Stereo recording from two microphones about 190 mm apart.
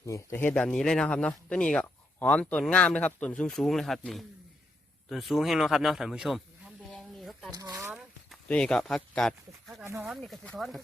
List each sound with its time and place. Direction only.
0.0 s speech: 15° left (ahead or behind)
6.9 s a sound: centre (ahead or behind)
7.5 s speech: 20° right (ahead or behind)
8.3 s speech: 5° left (ahead or behind)
9.8 s speech: 15° right (ahead or behind)
10.1 s speech: centre (ahead or behind)